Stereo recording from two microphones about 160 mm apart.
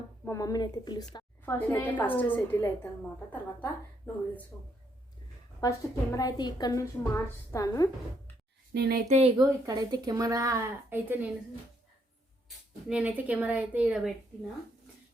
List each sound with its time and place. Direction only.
0.3 s a woman's voice: 20° left (ahead or behind)
1.5 s a woman's voice: 10° left (ahead or behind)
5.5 s a woman's voice: 20° left (ahead or behind)
8.7 s speech: 80° right
9.0 s speech: 45° right (ahead or behind)
9.4 s speech: 25° right (ahead or behind)
12.9 s a woman's voice: 10° right (ahead or behind)